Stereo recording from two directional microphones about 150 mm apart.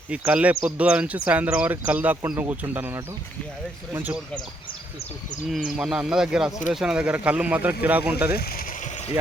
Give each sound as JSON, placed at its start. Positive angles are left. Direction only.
{"t": 0.1, "sound": "speech", "side_deg": -5}
{"t": 5.5, "sound": "speech", "side_deg": -5}
{"t": 8.4, "sound": "speech", "side_deg": 90}
{"t": 8.8, "sound": "a sound", "side_deg": 50}